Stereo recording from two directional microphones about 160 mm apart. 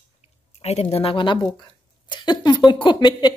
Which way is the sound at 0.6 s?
40° left (ahead or behind).